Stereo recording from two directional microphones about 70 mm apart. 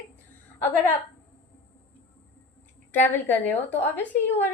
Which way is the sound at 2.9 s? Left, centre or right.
Left.